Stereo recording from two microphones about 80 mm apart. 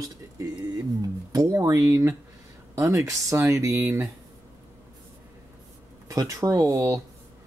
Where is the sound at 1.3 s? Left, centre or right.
Right.